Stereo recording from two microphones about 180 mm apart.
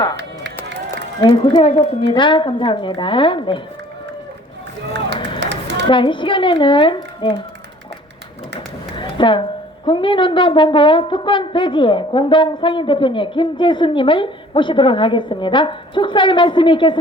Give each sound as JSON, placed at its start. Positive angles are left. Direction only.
{"t": 1.2, "sound": "a woman's voice", "side_deg": 30}
{"t": 4.9, "sound": "run", "side_deg": -70}
{"t": 5.4, "sound": "a sound", "side_deg": -75}
{"t": 5.9, "sound": "a woman's voice", "side_deg": 25}
{"t": 9.0, "sound": "a sound", "side_deg": 25}
{"t": 9.8, "sound": "a woman's voice", "side_deg": 30}